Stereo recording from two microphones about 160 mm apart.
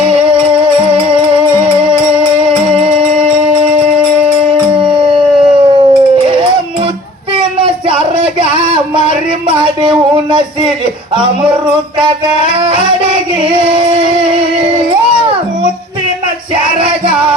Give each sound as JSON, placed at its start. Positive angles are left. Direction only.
{"t": 0.0, "sound": "music", "side_deg": -35}
{"t": 4.8, "sound": "howl", "side_deg": -30}
{"t": 7.3, "sound": "a sound", "side_deg": -35}
{"t": 13.4, "sound": "music", "side_deg": -35}